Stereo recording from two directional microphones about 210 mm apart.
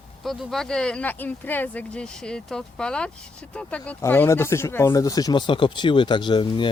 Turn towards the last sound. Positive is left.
turn(degrees=20)  # may be behind; listen again after turning